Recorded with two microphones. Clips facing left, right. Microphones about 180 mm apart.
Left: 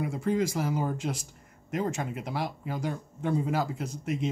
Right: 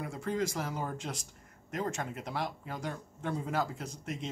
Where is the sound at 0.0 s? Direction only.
10° left (ahead or behind).